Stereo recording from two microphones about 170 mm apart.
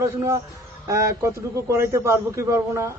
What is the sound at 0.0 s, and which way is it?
A man's voice, 15° right (ahead or behind).